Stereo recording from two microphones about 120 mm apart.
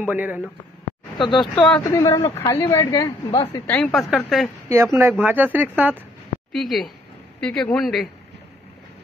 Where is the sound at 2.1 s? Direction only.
25° left (ahead or behind).